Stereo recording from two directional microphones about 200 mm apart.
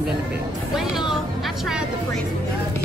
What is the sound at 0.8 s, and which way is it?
Speech, centre (ahead or behind).